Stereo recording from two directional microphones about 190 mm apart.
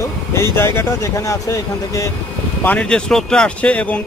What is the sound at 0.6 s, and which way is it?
Speech, 15° left (ahead or behind).